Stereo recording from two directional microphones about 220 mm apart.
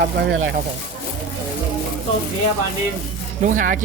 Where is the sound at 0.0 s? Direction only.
60° right (ahead or behind).